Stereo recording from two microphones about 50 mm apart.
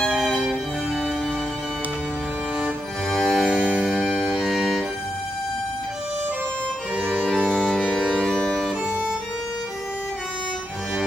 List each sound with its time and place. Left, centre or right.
3.1 s music: centre
4.1 s music: centre
4.5 s music: centre
8.2 s music: centre